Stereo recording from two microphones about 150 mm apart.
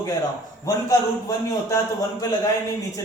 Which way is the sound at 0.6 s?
20° left (ahead or behind).